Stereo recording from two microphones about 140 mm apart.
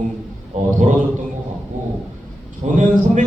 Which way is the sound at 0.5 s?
60° right (ahead or behind).